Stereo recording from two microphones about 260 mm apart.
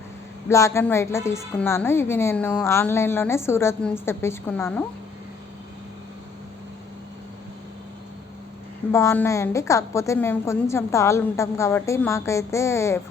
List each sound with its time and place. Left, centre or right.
0.4 s a woman's voice: centre
8.9 s a woman's voice: centre